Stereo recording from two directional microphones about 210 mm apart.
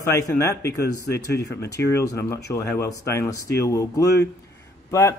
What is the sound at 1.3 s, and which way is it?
Speech, 50° left (ahead or behind).